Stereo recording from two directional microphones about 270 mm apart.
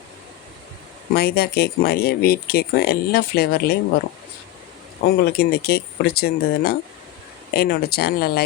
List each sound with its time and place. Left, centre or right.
1.1 s speech: left
5.0 s speech: left